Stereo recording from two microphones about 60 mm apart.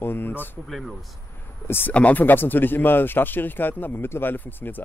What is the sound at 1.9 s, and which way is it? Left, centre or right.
Speech, left.